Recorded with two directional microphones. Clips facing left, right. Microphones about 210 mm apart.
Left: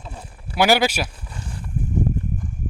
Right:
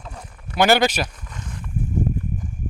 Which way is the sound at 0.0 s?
30° left (ahead or behind).